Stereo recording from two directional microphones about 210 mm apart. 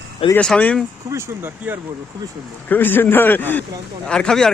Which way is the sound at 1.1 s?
10° right (ahead or behind).